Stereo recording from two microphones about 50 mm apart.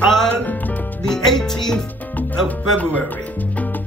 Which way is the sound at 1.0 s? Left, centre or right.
Centre.